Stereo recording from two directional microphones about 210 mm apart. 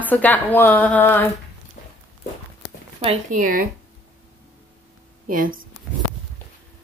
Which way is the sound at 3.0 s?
35° right (ahead or behind).